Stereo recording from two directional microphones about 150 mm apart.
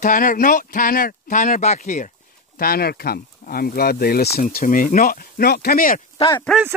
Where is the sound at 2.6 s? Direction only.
90° left; by 6.0 s 70° left (ahead or behind).